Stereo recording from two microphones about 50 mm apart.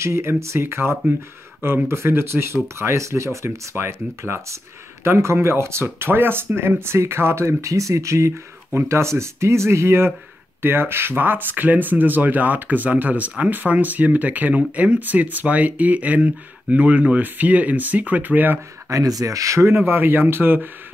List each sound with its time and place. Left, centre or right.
0.0 s speech: right
8.7 s speech: right
19.2 s speech: right
19.8 s speech: right